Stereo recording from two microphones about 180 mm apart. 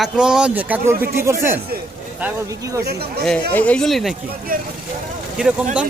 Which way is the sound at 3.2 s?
5° left (ahead or behind).